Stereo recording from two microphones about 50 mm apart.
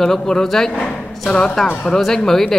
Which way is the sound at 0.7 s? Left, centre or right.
Left.